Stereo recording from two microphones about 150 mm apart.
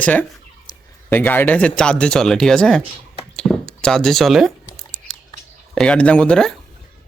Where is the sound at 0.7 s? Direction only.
25° left (ahead or behind).